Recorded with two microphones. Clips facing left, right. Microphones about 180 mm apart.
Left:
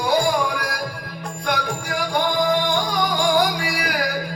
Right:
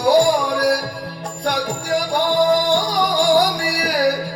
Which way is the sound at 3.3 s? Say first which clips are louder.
Right 3 dB; 35° right (ahead or behind).